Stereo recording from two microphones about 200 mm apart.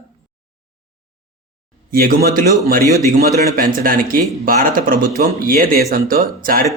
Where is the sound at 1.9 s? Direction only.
45° right (ahead or behind).